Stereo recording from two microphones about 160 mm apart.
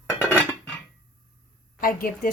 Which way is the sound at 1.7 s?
60° left (ahead or behind).